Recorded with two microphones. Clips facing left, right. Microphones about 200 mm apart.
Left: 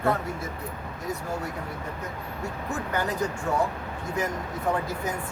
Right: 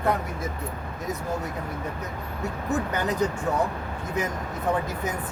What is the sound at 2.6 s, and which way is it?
Speech, 20° right (ahead or behind).